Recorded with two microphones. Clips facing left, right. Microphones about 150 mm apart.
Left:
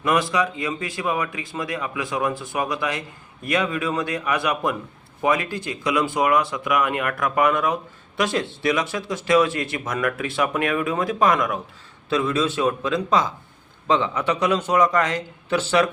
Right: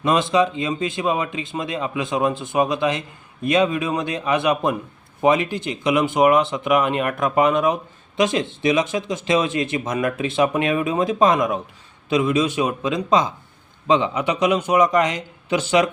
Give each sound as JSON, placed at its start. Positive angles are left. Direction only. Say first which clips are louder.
{"t": 0.0, "sound": "speech", "louder": "right 3 dB", "side_deg": -25}